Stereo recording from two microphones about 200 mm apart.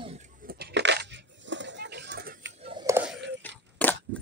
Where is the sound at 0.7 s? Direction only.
65° right (ahead or behind).